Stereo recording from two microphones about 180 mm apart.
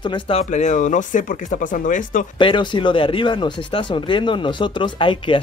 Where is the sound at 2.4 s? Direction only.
25° left (ahead or behind).